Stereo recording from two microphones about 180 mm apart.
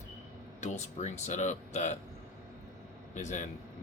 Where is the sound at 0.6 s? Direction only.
40° left (ahead or behind).